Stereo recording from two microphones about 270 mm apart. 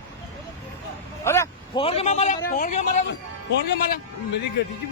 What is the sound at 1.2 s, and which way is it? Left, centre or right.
A man's voice, centre.